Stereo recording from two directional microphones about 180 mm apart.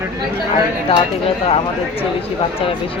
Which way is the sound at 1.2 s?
30° left (ahead or behind).